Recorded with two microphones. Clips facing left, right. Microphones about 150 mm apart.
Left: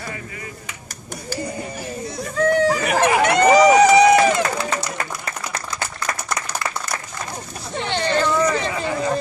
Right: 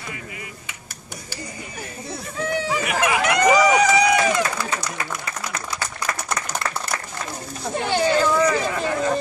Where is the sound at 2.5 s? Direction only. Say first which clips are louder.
Left 4 dB; 45° left (ahead or behind).